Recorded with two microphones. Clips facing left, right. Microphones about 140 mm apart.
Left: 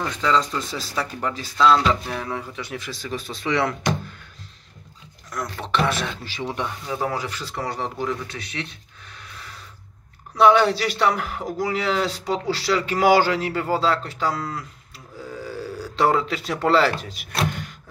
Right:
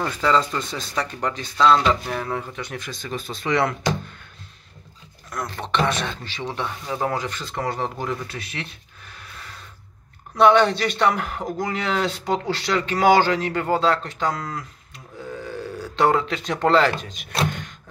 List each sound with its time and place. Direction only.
0.0 s speech: 5° right (ahead or behind)
5.3 s speech: centre (ahead or behind)
17.4 s a sound: 5° left (ahead or behind)